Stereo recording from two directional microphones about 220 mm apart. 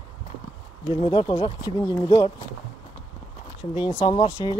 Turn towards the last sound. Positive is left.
turn(degrees=15)  # may be behind; listen again after turning